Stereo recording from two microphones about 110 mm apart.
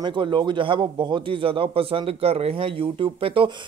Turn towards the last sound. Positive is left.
turn(degrees=-55)  # may be behind; listen again after turning